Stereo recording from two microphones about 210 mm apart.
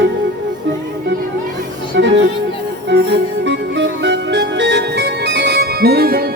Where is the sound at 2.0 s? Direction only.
55° right (ahead or behind).